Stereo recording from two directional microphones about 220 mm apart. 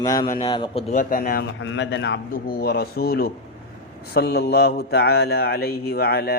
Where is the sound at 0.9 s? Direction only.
40° left (ahead or behind).